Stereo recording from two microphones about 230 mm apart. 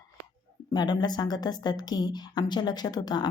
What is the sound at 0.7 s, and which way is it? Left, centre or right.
Speech, centre.